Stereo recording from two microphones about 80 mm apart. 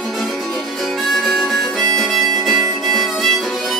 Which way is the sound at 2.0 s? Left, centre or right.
Centre.